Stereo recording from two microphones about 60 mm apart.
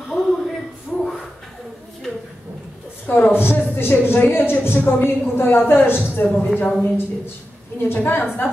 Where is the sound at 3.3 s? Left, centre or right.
Left.